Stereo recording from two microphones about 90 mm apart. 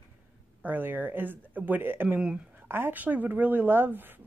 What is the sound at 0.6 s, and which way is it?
Speech, 20° right (ahead or behind).